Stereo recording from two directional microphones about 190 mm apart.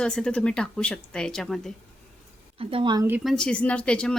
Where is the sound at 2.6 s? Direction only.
30° right (ahead or behind).